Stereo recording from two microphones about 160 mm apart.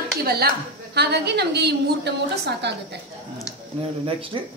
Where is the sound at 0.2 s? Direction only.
80° right.